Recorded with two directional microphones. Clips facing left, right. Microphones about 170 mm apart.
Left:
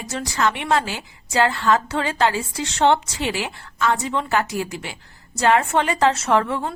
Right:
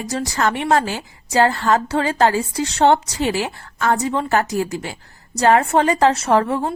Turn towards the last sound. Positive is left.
turn(degrees=-35)  # may be behind; listen again after turning